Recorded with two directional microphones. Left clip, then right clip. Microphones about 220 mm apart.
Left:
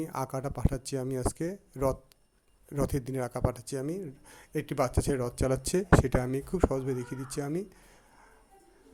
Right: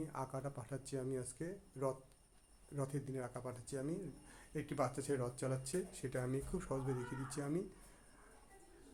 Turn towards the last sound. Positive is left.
turn(degrees=30)  # may be behind; listen again after turning